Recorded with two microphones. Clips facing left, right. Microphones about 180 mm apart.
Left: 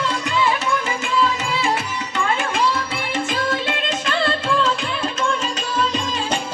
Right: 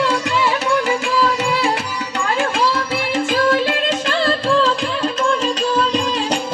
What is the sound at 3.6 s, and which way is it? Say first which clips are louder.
Music: right 5 dB; 35° right (ahead or behind).